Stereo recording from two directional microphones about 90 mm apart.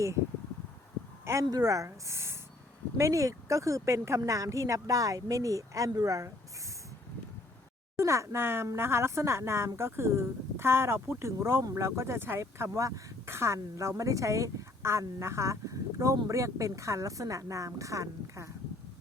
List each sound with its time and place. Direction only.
1.2 s speech: 30° right (ahead or behind)
1.5 s speech: 40° right (ahead or behind)
7.9 s speech: 35° right (ahead or behind)